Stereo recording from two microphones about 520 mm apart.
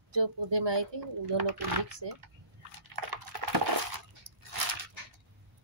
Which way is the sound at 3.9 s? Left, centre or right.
Right.